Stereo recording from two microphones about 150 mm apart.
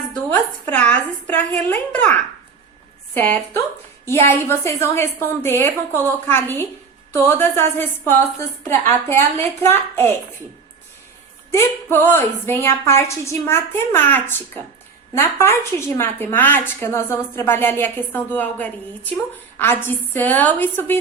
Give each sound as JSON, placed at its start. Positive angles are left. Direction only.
{"t": 0.6, "sound": "a woman's voice", "side_deg": 10}
{"t": 11.5, "sound": "a woman's voice", "side_deg": 15}